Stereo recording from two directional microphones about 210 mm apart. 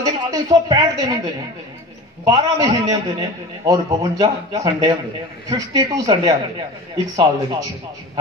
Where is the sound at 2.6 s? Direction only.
15° right (ahead or behind).